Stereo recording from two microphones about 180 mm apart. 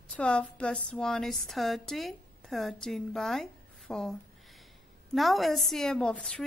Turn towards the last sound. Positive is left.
turn(degrees=5)  # may be behind; listen again after turning